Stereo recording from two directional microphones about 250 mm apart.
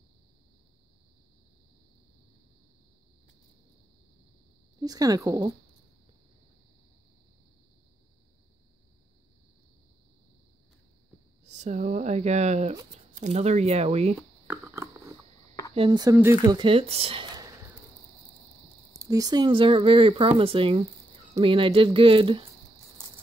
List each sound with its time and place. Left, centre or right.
4.7 s a woman's voice: centre
11.4 s speech: right
14.5 s a sound: centre
15.7 s speech: centre
18.9 s speech: centre